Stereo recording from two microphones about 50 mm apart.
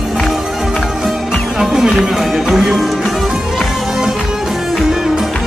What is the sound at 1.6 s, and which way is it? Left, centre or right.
Music, centre.